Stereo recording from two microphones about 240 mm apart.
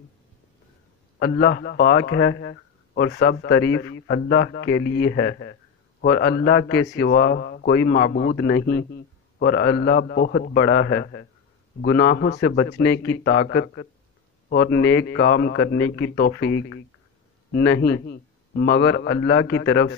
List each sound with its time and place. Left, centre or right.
1.2 s a man's voice: left